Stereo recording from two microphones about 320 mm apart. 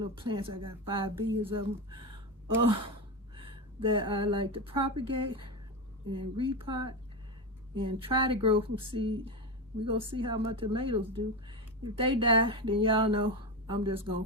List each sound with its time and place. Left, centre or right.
0.0 s speech: centre
3.3 s speech: centre